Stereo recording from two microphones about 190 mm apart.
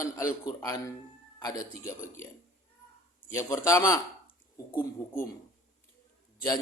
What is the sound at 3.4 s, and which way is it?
Speech, 15° left (ahead or behind).